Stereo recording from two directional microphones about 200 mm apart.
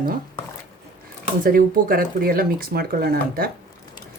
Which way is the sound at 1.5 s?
45° right (ahead or behind).